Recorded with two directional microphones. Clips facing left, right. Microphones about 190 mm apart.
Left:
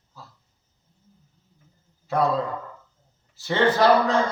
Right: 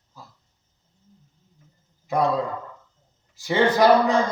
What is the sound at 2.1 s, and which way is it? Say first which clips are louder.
Speech: even; 15° right (ahead or behind).